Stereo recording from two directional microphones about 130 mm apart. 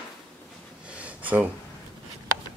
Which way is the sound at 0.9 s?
10° right (ahead or behind).